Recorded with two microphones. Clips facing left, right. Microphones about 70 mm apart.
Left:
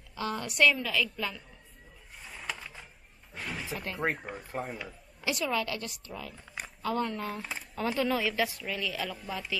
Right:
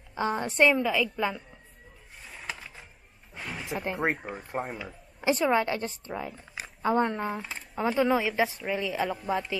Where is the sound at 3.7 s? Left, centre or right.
Centre.